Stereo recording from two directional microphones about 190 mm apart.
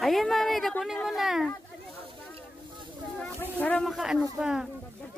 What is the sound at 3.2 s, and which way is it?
Speech, 10° left (ahead or behind).